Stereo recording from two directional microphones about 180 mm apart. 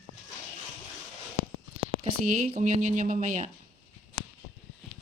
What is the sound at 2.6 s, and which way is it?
Speech, 45° right (ahead or behind).